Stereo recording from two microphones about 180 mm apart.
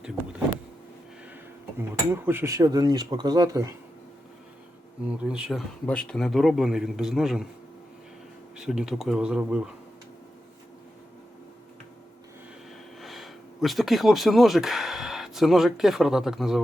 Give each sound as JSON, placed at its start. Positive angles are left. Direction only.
{"t": 0.0, "sound": "power windows", "side_deg": -5}
{"t": 1.8, "sound": "speech", "side_deg": -10}
{"t": 5.2, "sound": "a man's voice", "side_deg": -5}
{"t": 8.5, "sound": "a man's voice", "side_deg": -5}
{"t": 13.0, "sound": "speech", "side_deg": 0}